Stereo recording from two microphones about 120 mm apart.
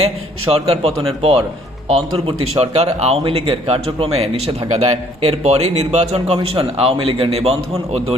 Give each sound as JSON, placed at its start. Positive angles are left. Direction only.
{"t": 0.5, "sound": "a man's voice", "side_deg": -55}